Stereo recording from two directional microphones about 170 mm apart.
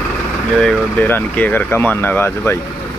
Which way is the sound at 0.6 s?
5° left (ahead or behind).